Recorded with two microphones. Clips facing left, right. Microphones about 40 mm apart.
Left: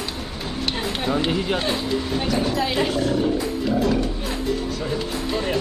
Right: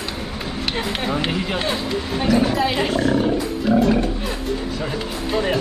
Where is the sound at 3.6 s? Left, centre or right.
Centre.